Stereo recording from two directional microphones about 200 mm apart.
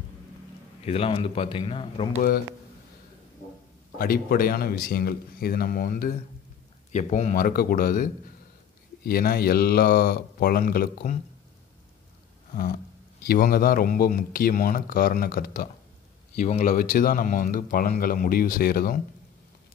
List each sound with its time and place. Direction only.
0.8 s speech: 30° left (ahead or behind)
4.0 s speech: 45° left (ahead or behind)
6.9 s speech: 35° left (ahead or behind)
13.2 s speech: 45° left (ahead or behind)